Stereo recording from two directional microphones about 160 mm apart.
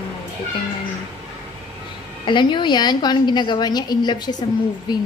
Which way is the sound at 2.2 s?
30° left (ahead or behind).